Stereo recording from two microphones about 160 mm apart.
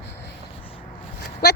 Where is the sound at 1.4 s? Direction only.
90° left.